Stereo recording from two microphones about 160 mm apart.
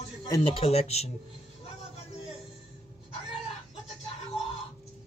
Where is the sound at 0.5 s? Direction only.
40° left (ahead or behind).